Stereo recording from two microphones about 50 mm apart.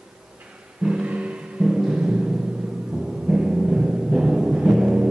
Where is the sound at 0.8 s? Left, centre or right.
Right.